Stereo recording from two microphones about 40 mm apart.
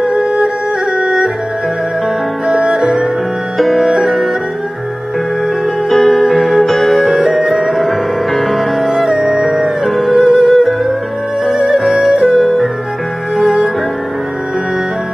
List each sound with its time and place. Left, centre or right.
0.0 s music: right
2.4 s music: centre
3.5 s music: centre
5.9 s music: centre